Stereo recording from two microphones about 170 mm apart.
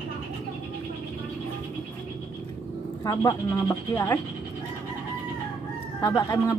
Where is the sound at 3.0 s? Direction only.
20° left (ahead or behind).